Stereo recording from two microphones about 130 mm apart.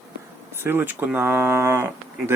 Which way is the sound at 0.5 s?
20° right (ahead or behind).